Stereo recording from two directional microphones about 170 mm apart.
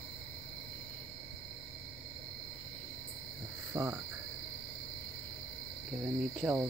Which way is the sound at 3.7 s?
15° right (ahead or behind).